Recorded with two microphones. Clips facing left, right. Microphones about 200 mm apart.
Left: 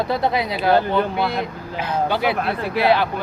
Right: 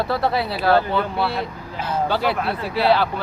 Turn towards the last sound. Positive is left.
turn(degrees=15)  # may be behind; listen again after turning